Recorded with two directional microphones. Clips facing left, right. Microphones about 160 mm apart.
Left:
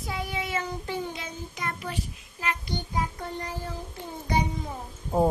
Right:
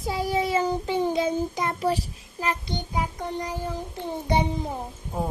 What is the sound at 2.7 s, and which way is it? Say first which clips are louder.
Music: right 1 dB; 15° right (ahead or behind).